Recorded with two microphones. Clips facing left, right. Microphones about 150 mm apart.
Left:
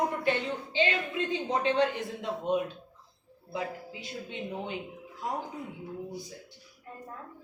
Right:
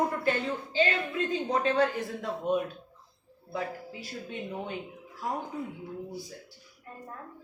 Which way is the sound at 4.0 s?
20° left (ahead or behind).